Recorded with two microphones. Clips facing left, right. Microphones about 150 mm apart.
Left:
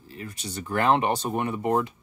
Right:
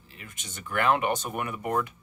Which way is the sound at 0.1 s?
35° left (ahead or behind).